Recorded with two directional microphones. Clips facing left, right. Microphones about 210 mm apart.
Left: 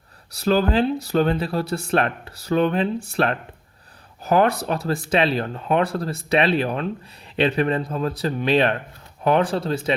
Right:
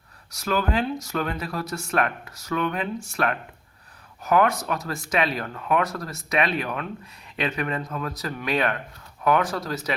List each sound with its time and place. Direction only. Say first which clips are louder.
0.3 s speech: left 6 dB; 30° left (ahead or behind)